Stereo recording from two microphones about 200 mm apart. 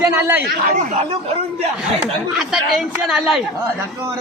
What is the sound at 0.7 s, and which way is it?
Speech, 40° right (ahead or behind).